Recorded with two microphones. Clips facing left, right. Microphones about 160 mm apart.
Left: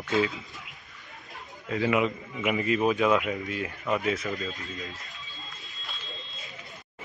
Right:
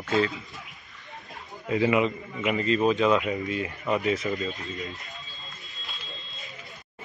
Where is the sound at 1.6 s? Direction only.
5° right (ahead or behind).